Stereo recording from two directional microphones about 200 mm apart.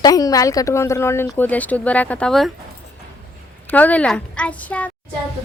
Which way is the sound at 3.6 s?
10° left (ahead or behind).